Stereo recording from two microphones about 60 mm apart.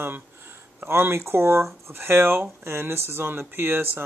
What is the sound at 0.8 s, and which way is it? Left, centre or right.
Speech, right.